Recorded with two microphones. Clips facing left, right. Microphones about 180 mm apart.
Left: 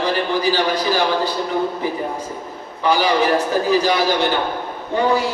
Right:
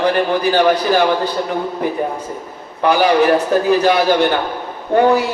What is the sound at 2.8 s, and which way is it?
A man's voice, 60° right (ahead or behind).